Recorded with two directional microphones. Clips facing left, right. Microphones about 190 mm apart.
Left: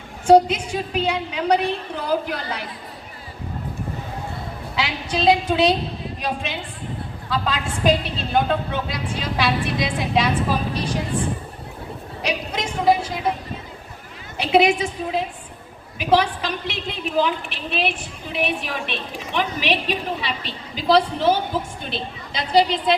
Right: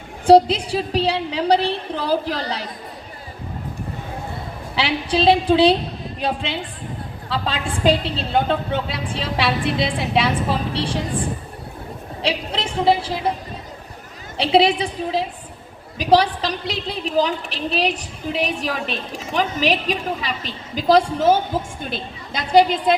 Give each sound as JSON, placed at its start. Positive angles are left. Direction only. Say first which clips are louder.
{"t": 0.3, "sound": "a woman's voice", "louder": "right 2 dB", "side_deg": -35}
{"t": 4.7, "sound": "a woman's voice", "louder": "right 5 dB", "side_deg": -30}
{"t": 12.2, "sound": "a sound", "louder": "right 2 dB", "side_deg": -30}
{"t": 14.3, "sound": "a woman's voice", "louder": "right 1 dB", "side_deg": -30}